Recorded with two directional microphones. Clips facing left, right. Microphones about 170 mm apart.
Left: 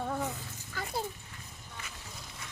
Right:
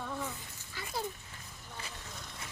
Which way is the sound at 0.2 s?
70° left (ahead or behind).